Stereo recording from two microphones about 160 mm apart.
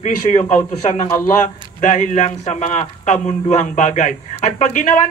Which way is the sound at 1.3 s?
50° left (ahead or behind).